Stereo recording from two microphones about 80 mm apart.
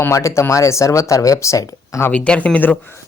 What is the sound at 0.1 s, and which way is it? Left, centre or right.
Speech, left.